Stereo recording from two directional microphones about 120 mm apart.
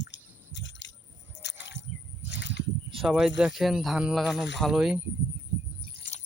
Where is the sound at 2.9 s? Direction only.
5° right (ahead or behind).